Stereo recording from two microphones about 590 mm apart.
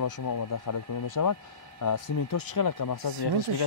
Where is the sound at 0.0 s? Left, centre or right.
Left.